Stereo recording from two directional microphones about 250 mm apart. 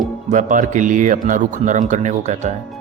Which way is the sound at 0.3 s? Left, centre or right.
Right.